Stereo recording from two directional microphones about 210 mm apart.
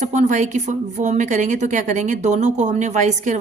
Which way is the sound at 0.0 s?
35° right (ahead or behind).